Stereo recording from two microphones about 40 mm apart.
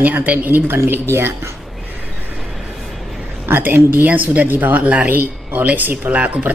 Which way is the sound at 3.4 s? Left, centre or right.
Right.